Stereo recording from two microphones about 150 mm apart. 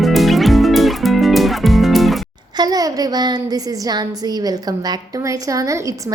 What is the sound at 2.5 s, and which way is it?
A woman's voice, 25° right (ahead or behind).